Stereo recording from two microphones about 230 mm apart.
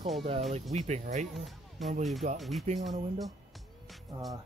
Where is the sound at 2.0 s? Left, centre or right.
Centre.